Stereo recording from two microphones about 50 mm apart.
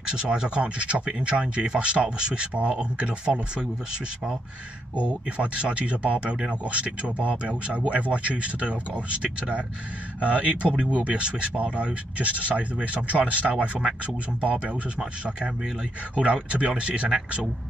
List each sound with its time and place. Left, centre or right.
0.0 s speech: centre
4.9 s speech: right